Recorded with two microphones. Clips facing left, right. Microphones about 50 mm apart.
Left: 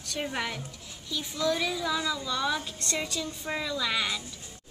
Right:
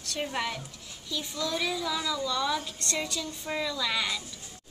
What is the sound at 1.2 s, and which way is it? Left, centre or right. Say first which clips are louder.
Speech: left 5 dB; centre.